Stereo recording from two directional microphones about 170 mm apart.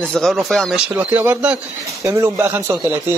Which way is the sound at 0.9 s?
10° right (ahead or behind).